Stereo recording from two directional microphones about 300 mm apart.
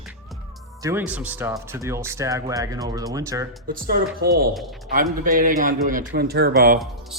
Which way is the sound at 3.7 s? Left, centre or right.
Right.